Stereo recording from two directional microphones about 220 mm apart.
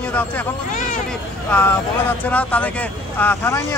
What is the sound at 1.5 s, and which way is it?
Speech, 10° left (ahead or behind).